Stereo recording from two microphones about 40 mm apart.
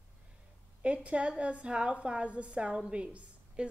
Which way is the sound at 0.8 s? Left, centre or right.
Right.